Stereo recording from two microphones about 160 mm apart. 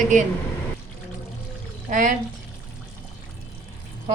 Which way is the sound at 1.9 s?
55° right (ahead or behind).